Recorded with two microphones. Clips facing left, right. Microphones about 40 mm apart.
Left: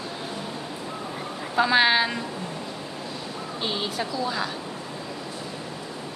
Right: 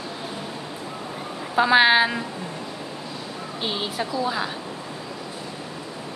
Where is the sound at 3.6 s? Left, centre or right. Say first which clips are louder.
Right 1 dB; centre.